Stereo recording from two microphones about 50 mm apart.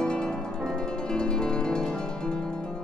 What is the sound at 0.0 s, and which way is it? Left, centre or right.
Music, centre.